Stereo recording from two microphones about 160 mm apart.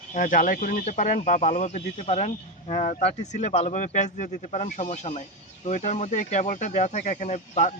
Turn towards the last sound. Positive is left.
turn(degrees=50)  # may be behind; listen again after turning